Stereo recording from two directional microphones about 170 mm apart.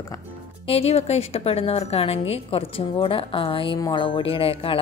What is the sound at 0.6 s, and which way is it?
A woman's voice, 35° left (ahead or behind).